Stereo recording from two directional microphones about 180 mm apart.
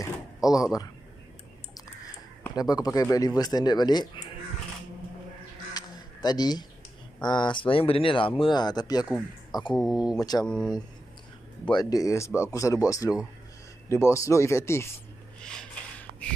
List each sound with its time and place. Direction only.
0.4 s speech: 20° left (ahead or behind)
2.5 s speech: 20° left (ahead or behind)
5.7 s a sound: 20° left (ahead or behind)
7.2 s speech: 25° left (ahead or behind)
9.8 s speech: centre (ahead or behind)
11.7 s speech: 20° left (ahead or behind)
15.4 s a sound: 5° left (ahead or behind)